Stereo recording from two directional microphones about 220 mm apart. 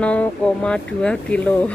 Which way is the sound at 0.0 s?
5° left (ahead or behind).